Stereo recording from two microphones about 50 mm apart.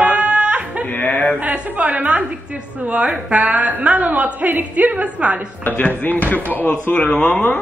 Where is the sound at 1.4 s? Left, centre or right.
Right.